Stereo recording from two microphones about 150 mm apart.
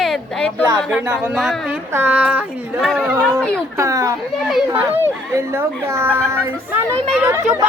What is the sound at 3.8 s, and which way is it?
Speech, 20° right (ahead or behind).